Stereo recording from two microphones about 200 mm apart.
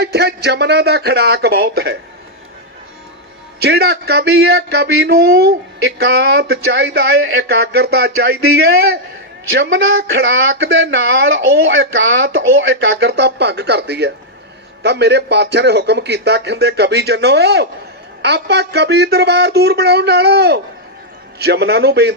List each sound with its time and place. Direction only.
0.0 s a man's voice: 55° right (ahead or behind)
3.6 s speech: 55° right (ahead or behind)
9.5 s a man's voice: 65° right (ahead or behind)